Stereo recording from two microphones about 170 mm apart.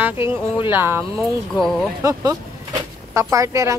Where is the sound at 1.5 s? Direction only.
Centre (ahead or behind).